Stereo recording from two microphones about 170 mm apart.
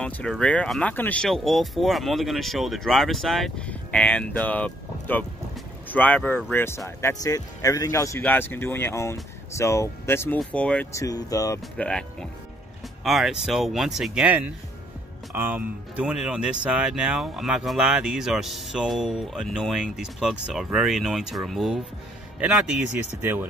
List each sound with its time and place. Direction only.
0.0 s speech: 5° left (ahead or behind)
10.9 s speech: 20° left (ahead or behind)
11.7 s speech: 5° left (ahead or behind)